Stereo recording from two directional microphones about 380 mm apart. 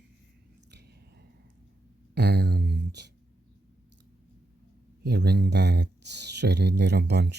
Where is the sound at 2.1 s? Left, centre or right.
Right.